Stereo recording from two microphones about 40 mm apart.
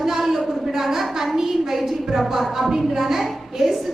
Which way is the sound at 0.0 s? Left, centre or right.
Centre.